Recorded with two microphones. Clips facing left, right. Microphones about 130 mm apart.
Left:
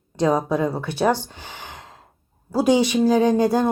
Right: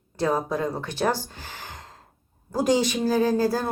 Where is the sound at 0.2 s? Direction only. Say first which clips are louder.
Left 5 dB; 15° left (ahead or behind).